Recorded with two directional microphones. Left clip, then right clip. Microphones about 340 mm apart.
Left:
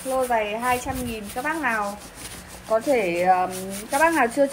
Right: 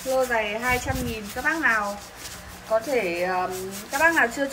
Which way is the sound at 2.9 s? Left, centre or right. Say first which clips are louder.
Left 5 dB; left.